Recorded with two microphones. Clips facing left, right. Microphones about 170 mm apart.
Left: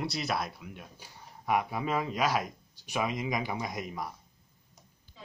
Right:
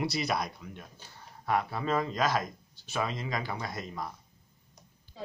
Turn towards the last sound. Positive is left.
turn(degrees=-40)  # may be behind; listen again after turning